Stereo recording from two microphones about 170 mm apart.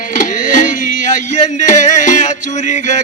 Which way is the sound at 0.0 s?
50° left (ahead or behind).